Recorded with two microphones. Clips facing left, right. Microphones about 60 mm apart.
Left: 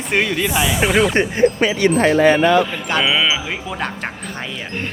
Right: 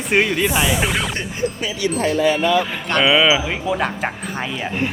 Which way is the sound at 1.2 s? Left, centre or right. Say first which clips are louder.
Left 9 dB; left.